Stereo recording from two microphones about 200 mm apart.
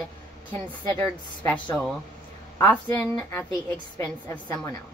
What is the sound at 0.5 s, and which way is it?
A woman's voice, 10° left (ahead or behind).